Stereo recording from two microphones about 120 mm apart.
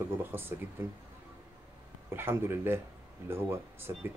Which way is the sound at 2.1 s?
20° right (ahead or behind).